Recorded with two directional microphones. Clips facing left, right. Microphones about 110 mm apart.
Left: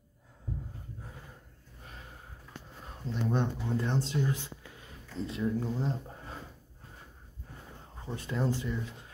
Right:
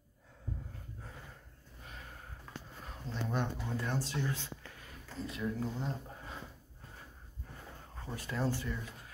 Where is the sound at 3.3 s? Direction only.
25° left (ahead or behind).